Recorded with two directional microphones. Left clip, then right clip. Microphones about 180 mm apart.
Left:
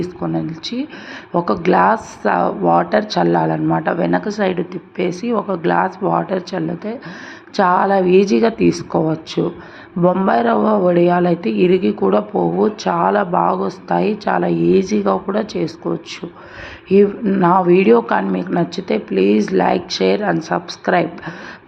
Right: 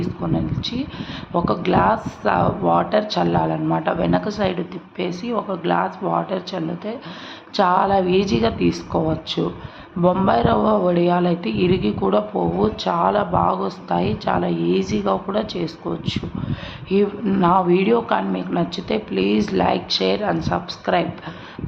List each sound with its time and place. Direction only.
0.0 s speech: 20° left (ahead or behind)